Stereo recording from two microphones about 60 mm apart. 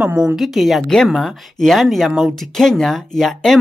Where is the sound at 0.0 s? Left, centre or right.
Right.